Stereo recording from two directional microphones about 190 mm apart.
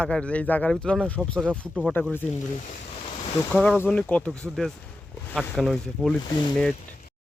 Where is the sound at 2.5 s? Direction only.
40° left (ahead or behind).